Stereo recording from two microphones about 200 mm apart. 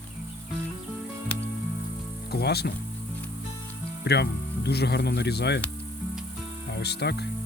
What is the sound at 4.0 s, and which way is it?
Speech, 55° left (ahead or behind).